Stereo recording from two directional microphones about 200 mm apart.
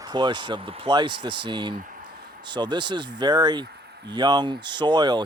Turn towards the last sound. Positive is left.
turn(degrees=-20)  # may be behind; listen again after turning